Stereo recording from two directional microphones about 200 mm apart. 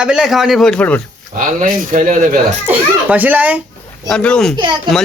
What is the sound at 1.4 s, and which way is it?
Speech, 40° right (ahead or behind).